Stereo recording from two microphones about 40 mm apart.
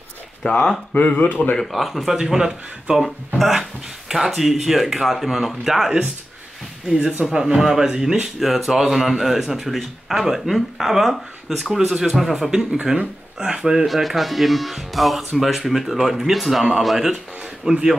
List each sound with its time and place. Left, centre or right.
0.5 s speech: left
0.9 s speech: left
1.6 s speech: centre
2.3 s speech: centre
3.3 s speech: centre
7.0 s speech: right
7.5 s speech: centre
8.4 s speech: centre
12.9 s speech: right
13.8 s speech: centre
17.6 s speech: centre